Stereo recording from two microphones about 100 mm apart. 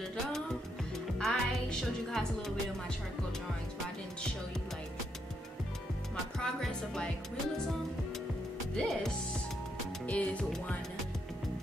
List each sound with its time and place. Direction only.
1.1 s speech: 5° left (ahead or behind)
6.4 s speech: 5° left (ahead or behind)
8.7 s speech: 5° left (ahead or behind)
10.0 s music: 15° left (ahead or behind)